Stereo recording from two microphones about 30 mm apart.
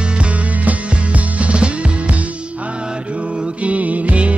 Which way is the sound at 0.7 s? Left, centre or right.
Right.